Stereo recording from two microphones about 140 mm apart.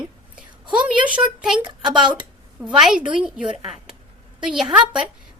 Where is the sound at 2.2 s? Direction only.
5° right (ahead or behind).